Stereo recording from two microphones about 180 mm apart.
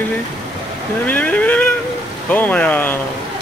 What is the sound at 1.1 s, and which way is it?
Speech, 10° left (ahead or behind).